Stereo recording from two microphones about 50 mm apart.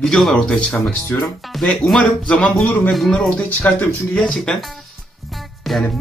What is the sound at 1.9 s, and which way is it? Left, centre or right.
Speech, centre.